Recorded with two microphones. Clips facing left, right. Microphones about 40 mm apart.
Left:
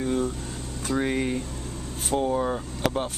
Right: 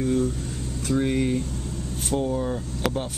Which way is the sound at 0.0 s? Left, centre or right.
Centre.